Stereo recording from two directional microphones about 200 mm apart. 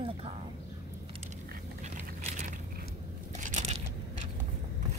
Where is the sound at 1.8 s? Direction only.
40° right (ahead or behind).